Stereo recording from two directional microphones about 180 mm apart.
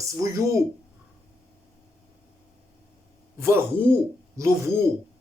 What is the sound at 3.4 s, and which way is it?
Speech, 15° right (ahead or behind).